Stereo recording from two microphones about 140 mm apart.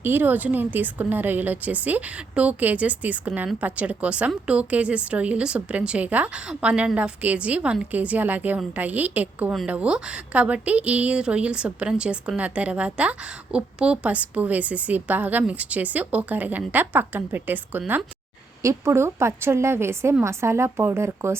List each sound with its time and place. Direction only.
0.0 s a woman's voice: 15° right (ahead or behind)